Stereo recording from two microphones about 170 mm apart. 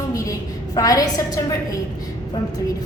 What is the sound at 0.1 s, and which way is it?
A woman's voice, 20° left (ahead or behind).